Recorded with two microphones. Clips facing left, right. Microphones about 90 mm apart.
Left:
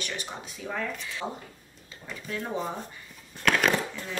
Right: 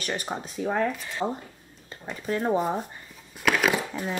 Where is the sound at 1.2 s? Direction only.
25° right (ahead or behind).